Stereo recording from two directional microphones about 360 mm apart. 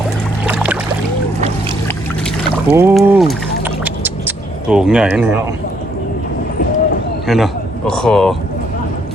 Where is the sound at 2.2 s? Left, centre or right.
Centre.